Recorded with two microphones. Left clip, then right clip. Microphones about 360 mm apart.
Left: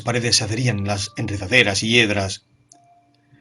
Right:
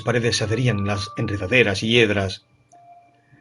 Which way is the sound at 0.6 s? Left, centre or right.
Left.